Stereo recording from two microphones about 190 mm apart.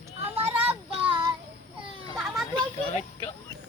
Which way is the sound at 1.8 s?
Centre (ahead or behind).